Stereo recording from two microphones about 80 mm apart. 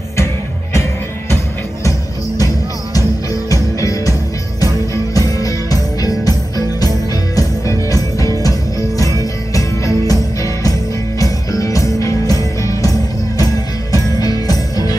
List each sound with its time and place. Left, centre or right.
1.9 s music: left
5.1 s music: left
7.3 s music: left
13.9 s music: left